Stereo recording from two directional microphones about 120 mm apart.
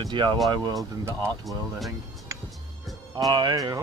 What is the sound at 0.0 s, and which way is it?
Speech, 40° right (ahead or behind).